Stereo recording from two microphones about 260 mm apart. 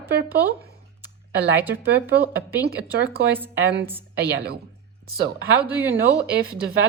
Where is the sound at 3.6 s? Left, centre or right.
Right.